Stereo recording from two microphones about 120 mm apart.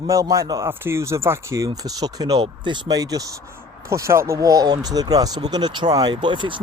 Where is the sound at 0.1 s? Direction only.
25° right (ahead or behind).